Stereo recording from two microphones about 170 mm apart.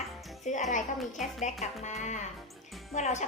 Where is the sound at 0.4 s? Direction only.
45° left (ahead or behind).